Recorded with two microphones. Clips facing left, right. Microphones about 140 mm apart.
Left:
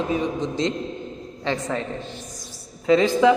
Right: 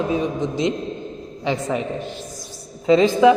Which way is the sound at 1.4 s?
15° right (ahead or behind).